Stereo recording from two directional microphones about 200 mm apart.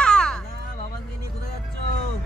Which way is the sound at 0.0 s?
5° left (ahead or behind).